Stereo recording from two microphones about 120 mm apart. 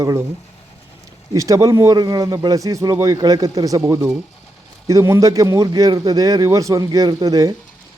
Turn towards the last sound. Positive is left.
turn(degrees=-30)  # may be behind; listen again after turning